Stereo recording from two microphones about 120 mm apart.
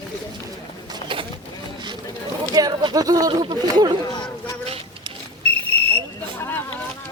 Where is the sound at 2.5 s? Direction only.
35° right (ahead or behind).